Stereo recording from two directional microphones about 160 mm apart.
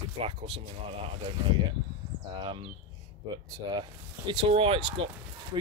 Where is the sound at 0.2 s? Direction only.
35° right (ahead or behind).